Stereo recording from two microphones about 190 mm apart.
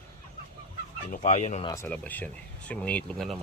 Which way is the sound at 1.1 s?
35° left (ahead or behind).